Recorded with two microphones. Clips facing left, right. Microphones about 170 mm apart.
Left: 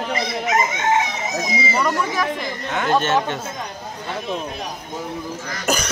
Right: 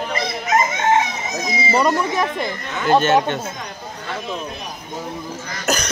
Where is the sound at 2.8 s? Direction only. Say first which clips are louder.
Right 4 dB; centre (ahead or behind).